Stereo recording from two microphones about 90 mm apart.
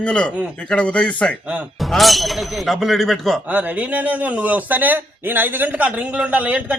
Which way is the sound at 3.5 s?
15° right (ahead or behind).